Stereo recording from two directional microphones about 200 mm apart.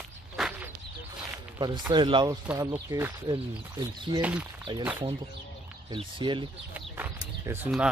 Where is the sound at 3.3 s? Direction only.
25° right (ahead or behind).